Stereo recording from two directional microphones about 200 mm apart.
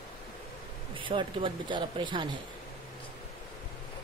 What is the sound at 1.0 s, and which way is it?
Speech, 25° right (ahead or behind).